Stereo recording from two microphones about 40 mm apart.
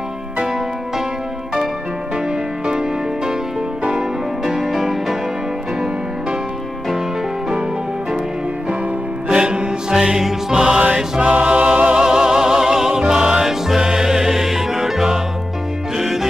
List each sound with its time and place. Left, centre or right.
2.2 s music: centre
4.5 s music: centre
9.3 s music: right
12.0 s music: centre